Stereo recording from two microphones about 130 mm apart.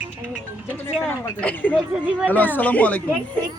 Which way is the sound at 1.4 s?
10° left (ahead or behind).